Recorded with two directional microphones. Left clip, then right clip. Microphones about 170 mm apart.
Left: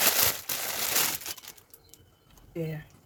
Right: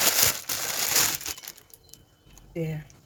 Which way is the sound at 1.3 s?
35° right (ahead or behind).